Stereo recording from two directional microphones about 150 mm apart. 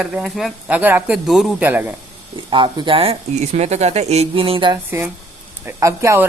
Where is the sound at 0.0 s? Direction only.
5° right (ahead or behind).